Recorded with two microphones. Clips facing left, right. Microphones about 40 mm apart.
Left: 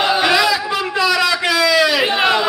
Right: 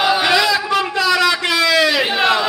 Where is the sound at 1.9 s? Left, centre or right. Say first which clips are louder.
Left 1 dB; centre.